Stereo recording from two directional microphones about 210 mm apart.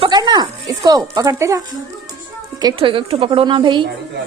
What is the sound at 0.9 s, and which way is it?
A woman's voice, 15° right (ahead or behind).